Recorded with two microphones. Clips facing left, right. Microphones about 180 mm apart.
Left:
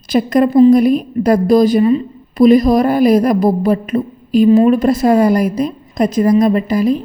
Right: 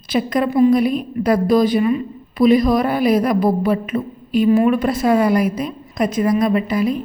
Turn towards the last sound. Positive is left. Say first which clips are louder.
# left 4 dB
turn(degrees=35)  # may be behind; listen again after turning